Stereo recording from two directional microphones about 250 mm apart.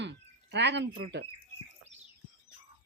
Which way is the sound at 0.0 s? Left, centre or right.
Right.